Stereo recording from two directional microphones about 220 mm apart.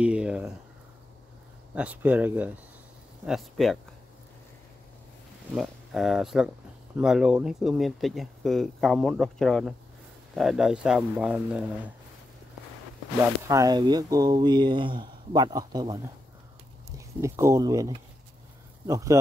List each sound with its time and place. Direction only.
0.0 s speech: 5° right (ahead or behind)
1.8 s speech: 5° right (ahead or behind)
5.5 s speech: centre (ahead or behind)
13.4 s speech: 15° right (ahead or behind)
17.2 s speech: 15° right (ahead or behind)